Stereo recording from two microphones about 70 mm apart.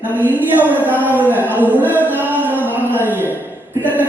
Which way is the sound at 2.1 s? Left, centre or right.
Right.